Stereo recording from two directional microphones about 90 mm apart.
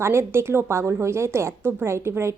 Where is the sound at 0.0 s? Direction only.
30° right (ahead or behind).